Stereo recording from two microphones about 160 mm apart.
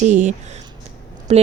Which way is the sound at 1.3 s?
40° right (ahead or behind).